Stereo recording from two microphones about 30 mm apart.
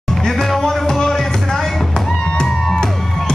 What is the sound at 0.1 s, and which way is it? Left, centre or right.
Music, centre.